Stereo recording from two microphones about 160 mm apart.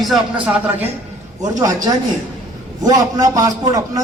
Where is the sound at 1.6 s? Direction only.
20° right (ahead or behind).